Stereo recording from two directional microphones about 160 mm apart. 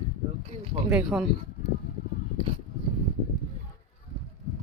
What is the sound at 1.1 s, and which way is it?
Speech, 5° right (ahead or behind).